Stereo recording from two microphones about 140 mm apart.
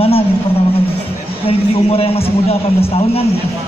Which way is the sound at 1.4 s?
45° left (ahead or behind).